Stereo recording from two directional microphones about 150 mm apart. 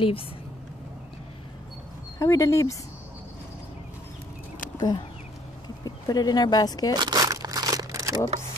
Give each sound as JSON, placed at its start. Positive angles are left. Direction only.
{"t": 2.1, "sound": "speech", "side_deg": 20}
{"t": 4.7, "sound": "speech", "side_deg": 30}
{"t": 7.0, "sound": "crumpling", "side_deg": -25}